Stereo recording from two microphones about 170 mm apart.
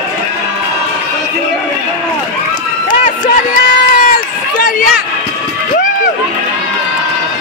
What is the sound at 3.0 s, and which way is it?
Run, 55° left (ahead or behind).